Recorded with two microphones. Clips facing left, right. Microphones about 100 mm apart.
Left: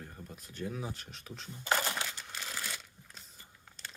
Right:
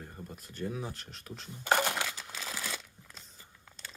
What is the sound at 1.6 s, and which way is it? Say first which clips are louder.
Speech: right 4 dB; 55° right (ahead or behind).